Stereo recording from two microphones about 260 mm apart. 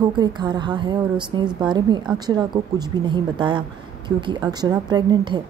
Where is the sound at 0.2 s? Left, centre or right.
Centre.